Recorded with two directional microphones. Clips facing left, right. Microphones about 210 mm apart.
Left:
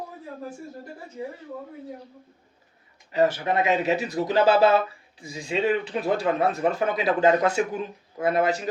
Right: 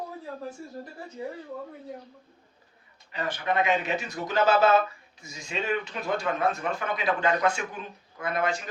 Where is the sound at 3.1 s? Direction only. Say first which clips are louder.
Left 7 dB; 40° left (ahead or behind).